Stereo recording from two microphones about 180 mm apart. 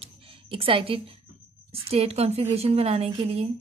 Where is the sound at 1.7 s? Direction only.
35° right (ahead or behind).